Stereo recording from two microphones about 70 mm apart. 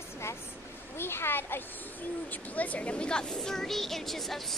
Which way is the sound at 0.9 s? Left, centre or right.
Left.